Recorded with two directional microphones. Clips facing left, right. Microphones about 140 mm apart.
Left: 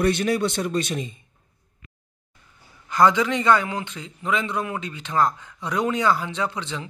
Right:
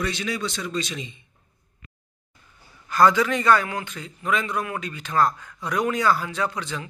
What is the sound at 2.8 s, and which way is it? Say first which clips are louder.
A man's voice: even; 20° left (ahead or behind).